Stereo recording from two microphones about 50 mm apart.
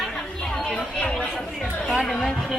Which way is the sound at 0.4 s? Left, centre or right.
Centre.